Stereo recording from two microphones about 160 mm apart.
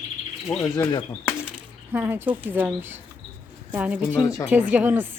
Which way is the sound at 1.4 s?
10° right (ahead or behind).